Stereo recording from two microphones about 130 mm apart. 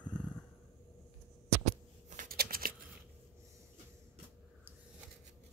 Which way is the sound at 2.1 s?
85° right.